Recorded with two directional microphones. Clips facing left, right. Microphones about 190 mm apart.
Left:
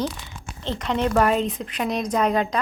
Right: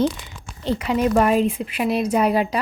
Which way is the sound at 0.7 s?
10° right (ahead or behind).